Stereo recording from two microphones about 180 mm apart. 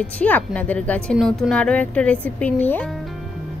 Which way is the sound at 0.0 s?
5° left (ahead or behind).